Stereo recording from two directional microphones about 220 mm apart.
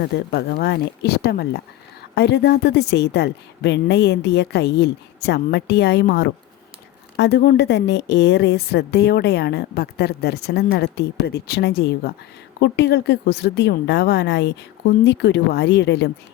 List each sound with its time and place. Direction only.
0.0 s a woman's voice: 50° left (ahead or behind)